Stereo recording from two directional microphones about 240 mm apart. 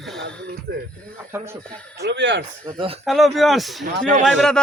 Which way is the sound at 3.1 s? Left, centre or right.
Centre.